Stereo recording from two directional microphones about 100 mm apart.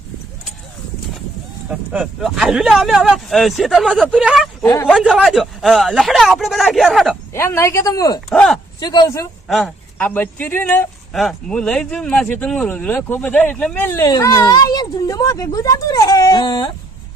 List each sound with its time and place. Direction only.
2.2 s speech: 5° right (ahead or behind)
7.3 s speech: 25° left (ahead or behind)
8.3 s speech: 5° left (ahead or behind)
8.8 s speech: 45° left (ahead or behind)
9.5 s speech: centre (ahead or behind)
10.0 s speech: 20° left (ahead or behind)
11.1 s speech: centre (ahead or behind); by 14.0 s 20° left (ahead or behind)
14.2 s speech: 35° left (ahead or behind)